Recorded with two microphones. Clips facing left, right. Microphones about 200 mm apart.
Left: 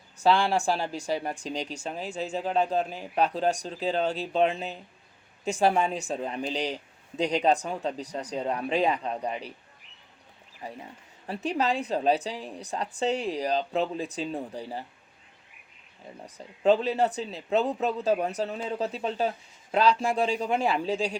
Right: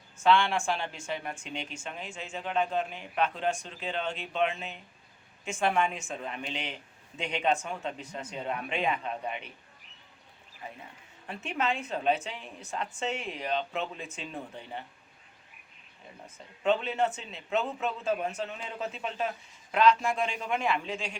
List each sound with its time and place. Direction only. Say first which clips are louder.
0.2 s speech: left 2 dB; 35° left (ahead or behind)
11.3 s speech: left 5 dB; 35° left (ahead or behind)
16.2 s speech: left 6 dB; 35° left (ahead or behind)